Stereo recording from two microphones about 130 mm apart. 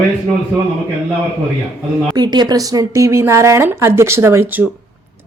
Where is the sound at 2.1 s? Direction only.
35° right (ahead or behind).